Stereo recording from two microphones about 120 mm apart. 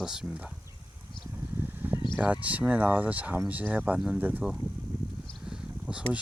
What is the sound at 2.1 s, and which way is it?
Speech, 10° right (ahead or behind).